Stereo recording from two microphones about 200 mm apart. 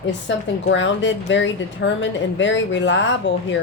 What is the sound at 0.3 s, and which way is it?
A woman's voice, 65° left (ahead or behind).